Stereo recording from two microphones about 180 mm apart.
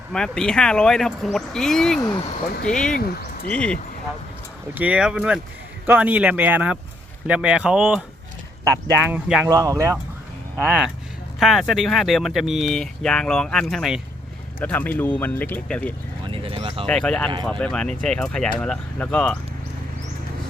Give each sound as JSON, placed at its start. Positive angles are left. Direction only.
{"t": 0.1, "sound": "speech", "side_deg": 5}
{"t": 2.0, "sound": "speech", "side_deg": 20}
{"t": 2.6, "sound": "speech", "side_deg": 5}
{"t": 4.7, "sound": "speech", "side_deg": -10}
{"t": 8.6, "sound": "speech", "side_deg": -15}
{"t": 9.5, "sound": "speech", "side_deg": -20}
{"t": 11.3, "sound": "speech", "side_deg": 0}
{"t": 16.3, "sound": "a sound", "side_deg": -30}
{"t": 16.8, "sound": "speech", "side_deg": 5}